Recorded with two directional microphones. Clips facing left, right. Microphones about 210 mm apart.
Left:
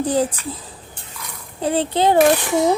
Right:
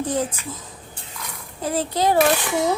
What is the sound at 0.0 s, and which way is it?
A child's voice, 35° left (ahead or behind).